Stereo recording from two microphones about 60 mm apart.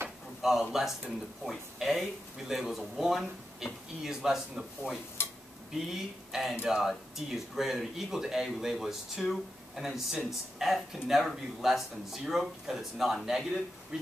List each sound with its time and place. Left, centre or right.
0.4 s speech: centre
5.2 s a sound: left
5.9 s speech: centre